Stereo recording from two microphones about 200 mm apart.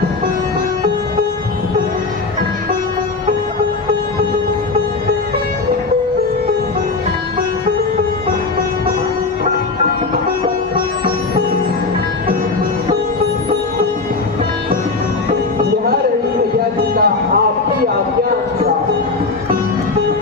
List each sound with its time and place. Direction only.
16.9 s music: 50° right (ahead or behind)